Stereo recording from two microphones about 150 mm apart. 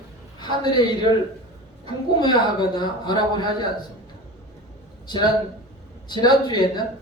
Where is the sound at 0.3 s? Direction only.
30° left (ahead or behind).